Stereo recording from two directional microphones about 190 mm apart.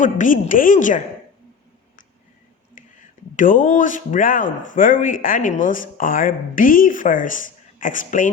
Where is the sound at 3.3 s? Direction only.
45° left (ahead or behind).